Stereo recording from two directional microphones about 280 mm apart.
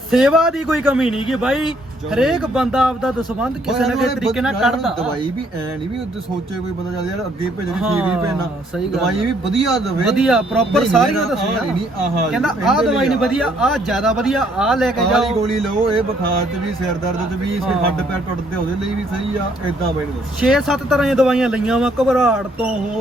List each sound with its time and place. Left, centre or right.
0.1 s speech: centre
7.8 s speech: centre
9.6 s speech: centre
20.4 s speech: centre